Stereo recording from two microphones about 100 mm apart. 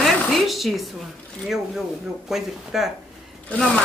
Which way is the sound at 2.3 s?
5° right (ahead or behind).